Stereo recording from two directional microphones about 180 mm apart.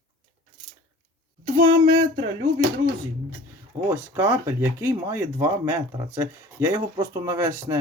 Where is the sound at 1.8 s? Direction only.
45° right (ahead or behind).